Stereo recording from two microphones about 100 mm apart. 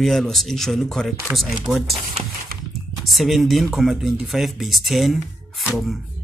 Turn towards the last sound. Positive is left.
turn(degrees=0)  # may be behind; listen again after turning